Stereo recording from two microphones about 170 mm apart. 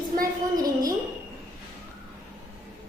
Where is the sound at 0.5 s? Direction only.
20° right (ahead or behind).